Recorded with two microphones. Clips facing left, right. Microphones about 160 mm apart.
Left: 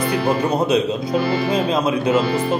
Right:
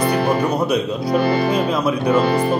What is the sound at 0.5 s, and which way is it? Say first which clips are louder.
Speech: left 1 dB; 25° left (ahead or behind).